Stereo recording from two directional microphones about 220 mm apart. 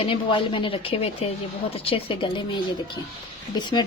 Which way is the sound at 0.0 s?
25° left (ahead or behind).